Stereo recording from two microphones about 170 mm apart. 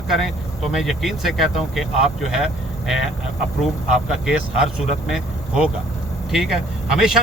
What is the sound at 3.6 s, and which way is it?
Speech, centre (ahead or behind).